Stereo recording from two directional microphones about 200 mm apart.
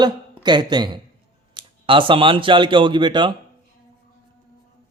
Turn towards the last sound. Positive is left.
turn(degrees=-25)  # may be behind; listen again after turning